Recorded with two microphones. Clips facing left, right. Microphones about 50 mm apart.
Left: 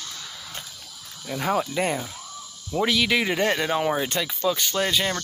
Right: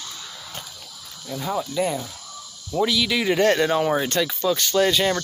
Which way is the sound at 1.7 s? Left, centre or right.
Left.